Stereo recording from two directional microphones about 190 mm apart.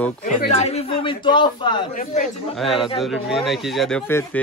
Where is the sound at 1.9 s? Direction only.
40° left (ahead or behind).